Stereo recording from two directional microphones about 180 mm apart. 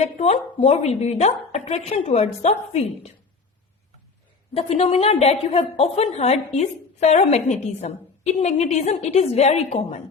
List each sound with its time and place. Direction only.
0.0 s a woman's voice: 35° left (ahead or behind)
4.5 s a woman's voice: 35° left (ahead or behind)